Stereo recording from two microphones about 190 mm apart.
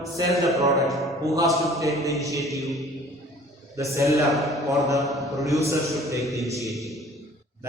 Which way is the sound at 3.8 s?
15° right (ahead or behind).